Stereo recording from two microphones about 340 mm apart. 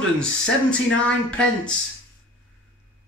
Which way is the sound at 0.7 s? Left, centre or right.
Centre.